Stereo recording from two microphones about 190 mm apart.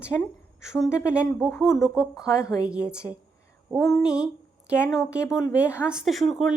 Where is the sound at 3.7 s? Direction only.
Centre (ahead or behind).